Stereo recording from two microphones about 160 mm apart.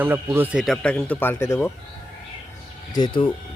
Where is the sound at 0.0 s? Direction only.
15° right (ahead or behind).